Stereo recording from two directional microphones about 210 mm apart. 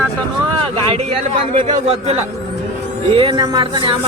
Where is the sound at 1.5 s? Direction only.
25° right (ahead or behind).